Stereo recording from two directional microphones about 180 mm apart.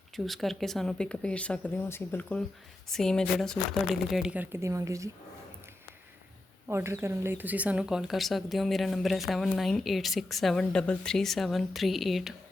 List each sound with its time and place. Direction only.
0.3 s speech: centre (ahead or behind); by 5.1 s 15° right (ahead or behind)
6.7 s speech: 15° right (ahead or behind)